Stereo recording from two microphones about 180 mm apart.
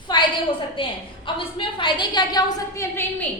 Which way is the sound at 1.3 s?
30° left (ahead or behind).